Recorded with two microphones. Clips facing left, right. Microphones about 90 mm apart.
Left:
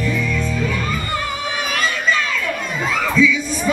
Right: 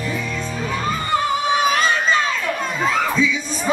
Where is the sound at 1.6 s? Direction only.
25° right (ahead or behind).